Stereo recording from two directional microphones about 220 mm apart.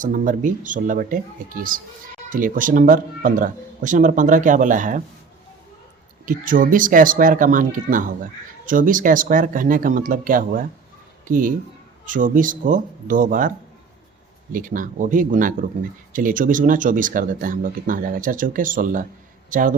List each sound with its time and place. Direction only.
0.0 s speech: 35° right (ahead or behind)
6.2 s speech: 40° right (ahead or behind)
14.5 s a man's voice: 40° right (ahead or behind)